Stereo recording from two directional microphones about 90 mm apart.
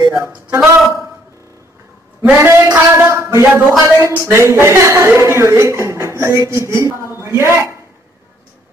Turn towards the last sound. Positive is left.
turn(degrees=-30)  # may be behind; listen again after turning